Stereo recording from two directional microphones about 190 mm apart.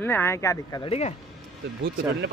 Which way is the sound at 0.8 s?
35° left (ahead or behind).